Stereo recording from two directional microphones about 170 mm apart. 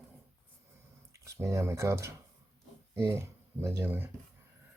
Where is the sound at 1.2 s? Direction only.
15° right (ahead or behind).